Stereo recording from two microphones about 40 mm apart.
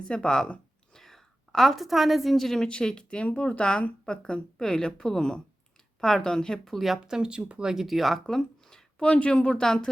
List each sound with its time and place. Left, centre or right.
0.1 s speech: left
0.9 s a woman's voice: centre
2.6 s speech: centre
3.2 s speech: left; by 6.6 s centre
6.7 s speech: centre
7.0 s speech: right
7.6 s speech: centre
8.3 s a sound: centre
9.0 s speech: left